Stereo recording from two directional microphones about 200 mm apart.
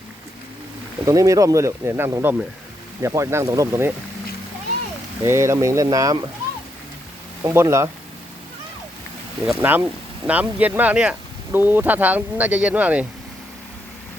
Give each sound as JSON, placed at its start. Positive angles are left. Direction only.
{"t": 1.0, "sound": "speech", "side_deg": -15}
{"t": 5.2, "sound": "speech", "side_deg": -15}
{"t": 7.4, "sound": "speech", "side_deg": -15}
{"t": 9.5, "sound": "speech", "side_deg": -10}